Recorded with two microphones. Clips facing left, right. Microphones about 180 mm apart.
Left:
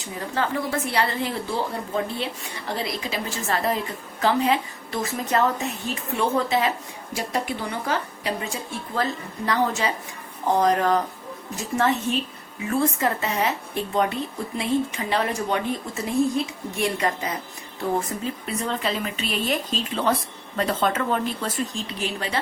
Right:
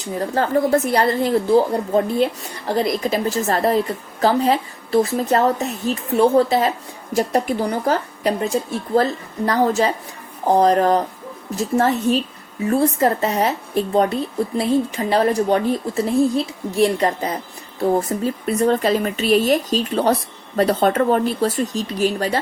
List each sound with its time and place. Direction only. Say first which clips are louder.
0.0 s a woman's voice: right 6 dB; 40° right (ahead or behind)